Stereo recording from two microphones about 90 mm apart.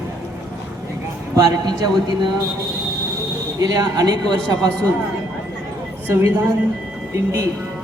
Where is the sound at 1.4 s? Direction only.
45° right (ahead or behind).